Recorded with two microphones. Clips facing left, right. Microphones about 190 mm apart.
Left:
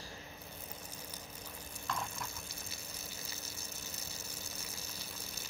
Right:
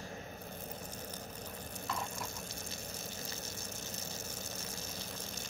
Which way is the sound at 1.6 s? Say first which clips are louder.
Right 5 dB; 40° right (ahead or behind).